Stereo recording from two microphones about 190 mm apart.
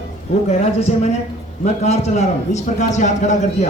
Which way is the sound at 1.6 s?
35° left (ahead or behind).